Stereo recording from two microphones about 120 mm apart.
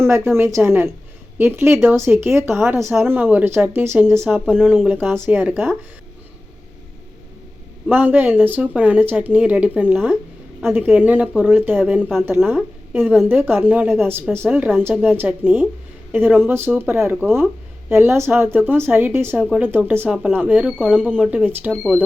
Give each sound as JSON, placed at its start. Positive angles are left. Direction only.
{"t": 0.0, "sound": "speech", "side_deg": -20}
{"t": 4.3, "sound": "speech", "side_deg": -10}
{"t": 7.9, "sound": "a woman's voice", "side_deg": -15}